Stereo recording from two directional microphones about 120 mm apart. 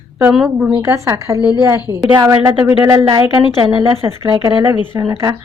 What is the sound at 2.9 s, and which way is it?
Speech, 30° right (ahead or behind).